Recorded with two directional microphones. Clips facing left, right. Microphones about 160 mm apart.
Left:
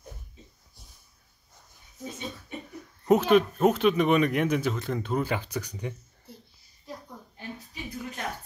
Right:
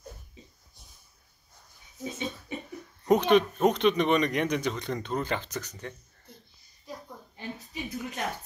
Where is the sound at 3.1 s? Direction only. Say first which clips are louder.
Left 1 dB; 5° left (ahead or behind).